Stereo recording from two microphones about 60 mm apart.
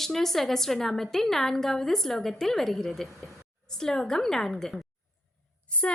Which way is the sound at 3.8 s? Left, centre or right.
Centre.